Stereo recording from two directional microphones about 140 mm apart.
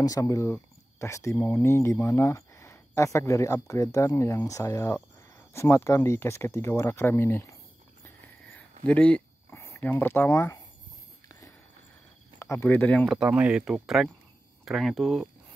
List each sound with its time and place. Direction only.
0.0 s speech: 25° left (ahead or behind)
8.8 s speech: 10° left (ahead or behind)
9.5 s speech: 20° left (ahead or behind)
12.4 s speech: 15° left (ahead or behind)